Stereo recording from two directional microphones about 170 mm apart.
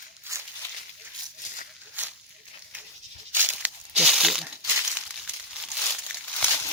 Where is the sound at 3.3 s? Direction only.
10° right (ahead or behind).